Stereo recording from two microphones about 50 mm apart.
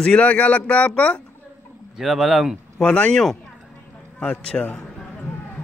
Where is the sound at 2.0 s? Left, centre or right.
Centre.